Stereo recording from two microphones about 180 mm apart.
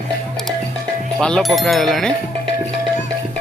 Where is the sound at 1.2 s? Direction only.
5° left (ahead or behind).